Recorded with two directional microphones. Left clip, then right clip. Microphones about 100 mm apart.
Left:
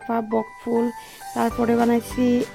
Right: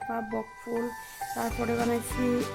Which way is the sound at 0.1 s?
50° left (ahead or behind).